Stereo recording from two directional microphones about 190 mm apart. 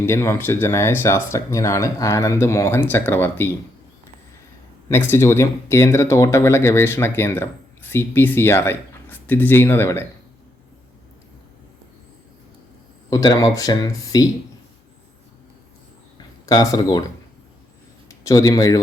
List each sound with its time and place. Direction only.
0.0 s speech: 15° left (ahead or behind)
4.9 s speech: 10° left (ahead or behind)
13.1 s speech: 20° left (ahead or behind)
16.1 s a sound: 20° left (ahead or behind)
18.1 s a man's voice: 20° left (ahead or behind)